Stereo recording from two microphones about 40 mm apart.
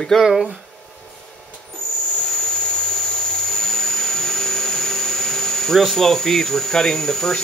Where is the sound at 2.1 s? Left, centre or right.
Centre.